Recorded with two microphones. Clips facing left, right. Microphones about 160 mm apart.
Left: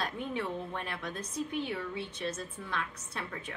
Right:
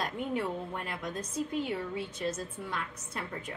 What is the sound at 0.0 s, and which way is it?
A woman's voice, 10° right (ahead or behind).